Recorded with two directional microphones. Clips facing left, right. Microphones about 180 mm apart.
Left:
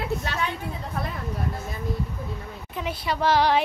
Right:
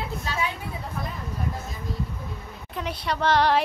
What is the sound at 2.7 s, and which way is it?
Child singing, centre (ahead or behind).